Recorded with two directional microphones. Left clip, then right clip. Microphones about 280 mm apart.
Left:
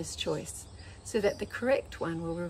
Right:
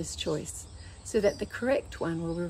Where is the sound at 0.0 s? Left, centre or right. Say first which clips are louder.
Right 1 dB; centre.